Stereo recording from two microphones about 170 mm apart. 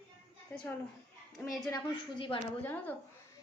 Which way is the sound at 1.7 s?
30° left (ahead or behind).